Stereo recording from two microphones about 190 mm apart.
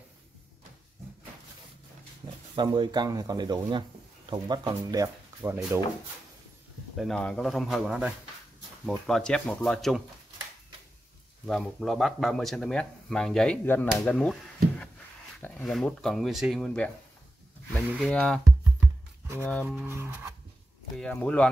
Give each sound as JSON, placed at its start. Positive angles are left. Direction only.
{"t": 2.5, "sound": "speech", "side_deg": -25}
{"t": 7.0, "sound": "speech", "side_deg": 5}
{"t": 11.4, "sound": "speech", "side_deg": 0}
{"t": 19.6, "sound": "speech", "side_deg": -10}
{"t": 21.0, "sound": "speech", "side_deg": 5}